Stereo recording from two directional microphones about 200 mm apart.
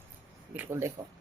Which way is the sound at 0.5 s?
15° right (ahead or behind).